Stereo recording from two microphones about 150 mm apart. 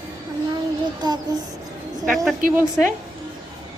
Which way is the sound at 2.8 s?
Centre (ahead or behind).